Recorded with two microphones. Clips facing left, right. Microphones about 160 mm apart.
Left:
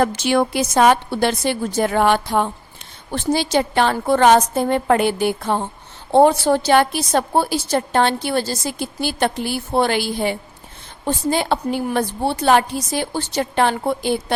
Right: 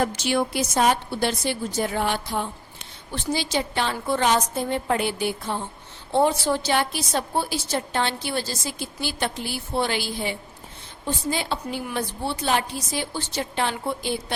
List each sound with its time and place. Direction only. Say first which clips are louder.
0.0 s a woman's voice: left 6 dB; 75° left (ahead or behind)